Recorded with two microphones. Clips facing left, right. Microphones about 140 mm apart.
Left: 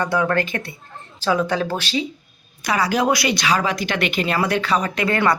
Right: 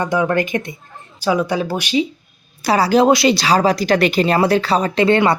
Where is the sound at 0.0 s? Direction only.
20° right (ahead or behind).